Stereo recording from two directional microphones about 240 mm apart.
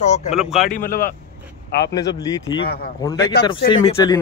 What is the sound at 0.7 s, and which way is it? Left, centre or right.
Speech, left.